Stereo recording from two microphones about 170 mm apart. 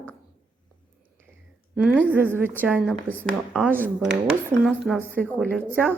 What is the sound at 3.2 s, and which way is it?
Speech, centre (ahead or behind).